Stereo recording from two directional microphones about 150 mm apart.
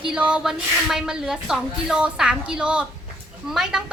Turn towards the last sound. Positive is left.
turn(degrees=-5)  # may be behind; listen again after turning